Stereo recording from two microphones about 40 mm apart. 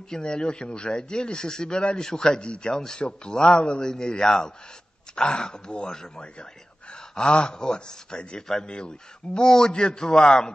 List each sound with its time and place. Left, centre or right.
0.1 s a man's voice: left